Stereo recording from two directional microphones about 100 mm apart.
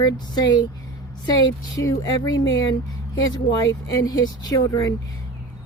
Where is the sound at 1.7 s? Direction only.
35° left (ahead or behind).